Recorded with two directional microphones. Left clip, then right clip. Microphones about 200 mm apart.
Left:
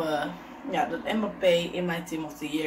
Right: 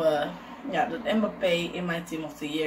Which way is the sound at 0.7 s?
10° right (ahead or behind).